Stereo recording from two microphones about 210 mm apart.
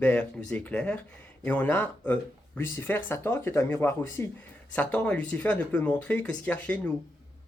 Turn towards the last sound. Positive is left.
turn(degrees=5)  # may be behind; listen again after turning